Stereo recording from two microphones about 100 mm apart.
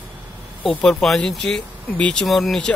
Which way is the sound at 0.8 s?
5° left (ahead or behind).